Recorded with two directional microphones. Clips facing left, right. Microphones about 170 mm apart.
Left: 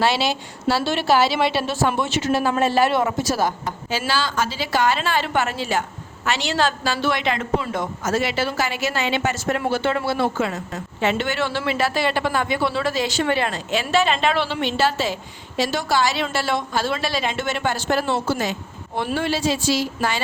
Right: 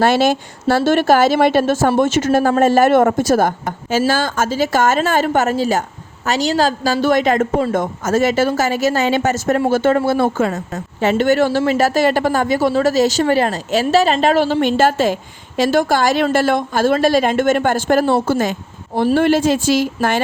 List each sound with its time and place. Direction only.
0.0 s a woman's voice: 50° right (ahead or behind)